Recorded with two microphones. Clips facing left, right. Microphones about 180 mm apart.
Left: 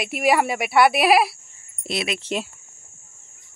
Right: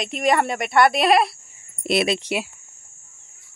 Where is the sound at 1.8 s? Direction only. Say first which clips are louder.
Right 7 dB; 65° right (ahead or behind).